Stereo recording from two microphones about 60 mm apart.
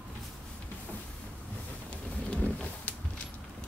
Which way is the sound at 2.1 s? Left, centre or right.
Left.